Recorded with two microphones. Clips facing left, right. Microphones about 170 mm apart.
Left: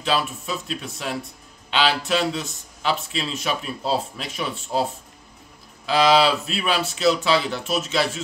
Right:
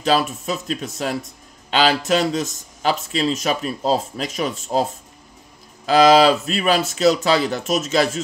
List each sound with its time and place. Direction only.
0.0 s speech: 40° right (ahead or behind)
5.9 s speech: 45° right (ahead or behind)